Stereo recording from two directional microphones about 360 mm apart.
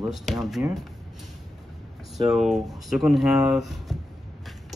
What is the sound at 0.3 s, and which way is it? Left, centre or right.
Speech, centre.